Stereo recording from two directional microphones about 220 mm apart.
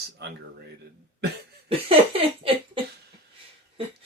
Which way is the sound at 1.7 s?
25° right (ahead or behind).